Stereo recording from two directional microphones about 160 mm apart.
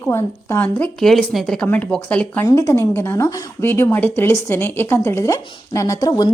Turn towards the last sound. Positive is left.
turn(degrees=25)  # may be behind; listen again after turning